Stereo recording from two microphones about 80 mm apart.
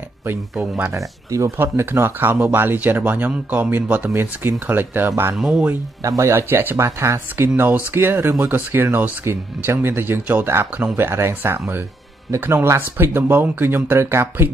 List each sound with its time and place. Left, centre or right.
0.9 s speech: right
1.6 s speech: right
5.4 s speech: centre
6.0 s speech: right